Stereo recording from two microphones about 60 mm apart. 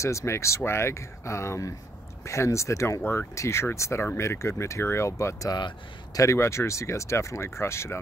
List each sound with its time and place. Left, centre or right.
0.0 s speech: left
3.0 s speech: left